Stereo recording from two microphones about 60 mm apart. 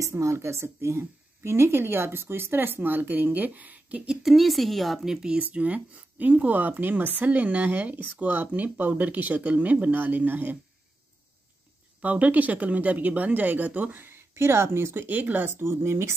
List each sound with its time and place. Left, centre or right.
0.0 s speech: right
4.1 s a woman's voice: centre
5.4 s speech: right
12.0 s speech: right
15.0 s speech: right